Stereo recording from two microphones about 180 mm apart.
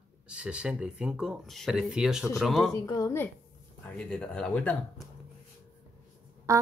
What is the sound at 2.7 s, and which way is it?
Speech, 20° left (ahead or behind).